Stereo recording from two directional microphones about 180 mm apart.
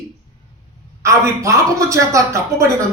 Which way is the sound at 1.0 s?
15° right (ahead or behind).